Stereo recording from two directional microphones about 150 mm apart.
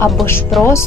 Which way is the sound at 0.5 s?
Centre (ahead or behind).